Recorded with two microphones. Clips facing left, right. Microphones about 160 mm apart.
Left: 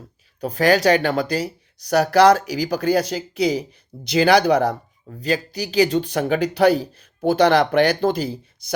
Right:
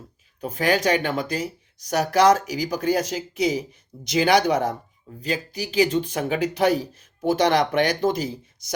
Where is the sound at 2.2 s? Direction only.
35° left (ahead or behind).